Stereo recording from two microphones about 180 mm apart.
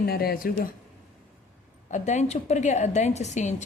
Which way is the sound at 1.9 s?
40° left (ahead or behind).